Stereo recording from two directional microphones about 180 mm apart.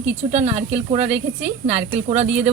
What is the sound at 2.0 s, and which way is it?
Speech, 40° right (ahead or behind).